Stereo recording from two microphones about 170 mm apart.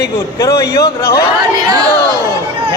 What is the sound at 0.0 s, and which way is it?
A man's voice, 20° left (ahead or behind).